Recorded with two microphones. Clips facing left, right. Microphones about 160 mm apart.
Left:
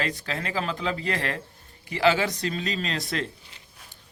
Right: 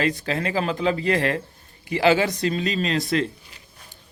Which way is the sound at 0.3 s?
60° right (ahead or behind).